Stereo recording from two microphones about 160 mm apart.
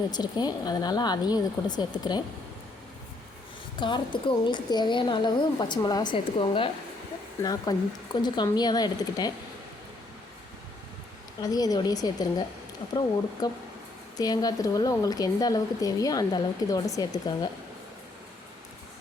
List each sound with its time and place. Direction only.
0.1 s speech: 25° left (ahead or behind)
3.8 s speech: 30° left (ahead or behind)
11.3 s speech: 25° left (ahead or behind)